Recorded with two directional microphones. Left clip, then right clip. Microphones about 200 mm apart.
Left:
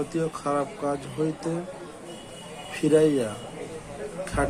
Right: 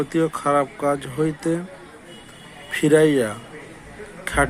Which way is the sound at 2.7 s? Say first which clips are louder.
Right 5 dB; 35° right (ahead or behind).